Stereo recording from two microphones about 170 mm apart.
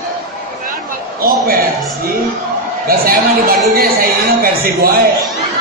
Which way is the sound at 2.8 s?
60° right (ahead or behind).